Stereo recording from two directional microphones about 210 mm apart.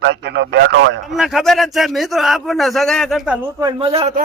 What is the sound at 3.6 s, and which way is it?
Speech, 20° right (ahead or behind).